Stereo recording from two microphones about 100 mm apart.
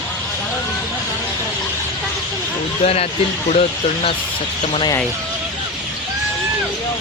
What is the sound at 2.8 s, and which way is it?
Speech, 90° left.